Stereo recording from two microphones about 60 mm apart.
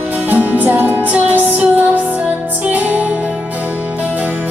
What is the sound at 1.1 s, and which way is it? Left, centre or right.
Music, right.